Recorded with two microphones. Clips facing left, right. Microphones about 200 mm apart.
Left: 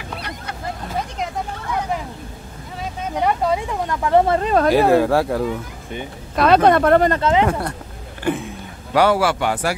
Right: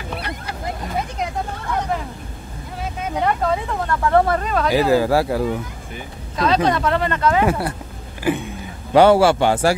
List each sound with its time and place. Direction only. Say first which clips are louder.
3.2 s speech: left 1 dB; 10° left (ahead or behind)
4.4 s speech: left 5 dB; 35° left (ahead or behind)
4.6 s speech: left 1 dB; 55° left (ahead or behind)
4.9 s speech: left 1 dB; centre (ahead or behind)
6.3 s speech: left 5 dB; 60° left (ahead or behind)
7.1 s speech: left 2 dB; 25° left (ahead or behind)
8.2 s speech: right 1 dB; centre (ahead or behind)
8.9 s speech: right 4 dB; 25° right (ahead or behind)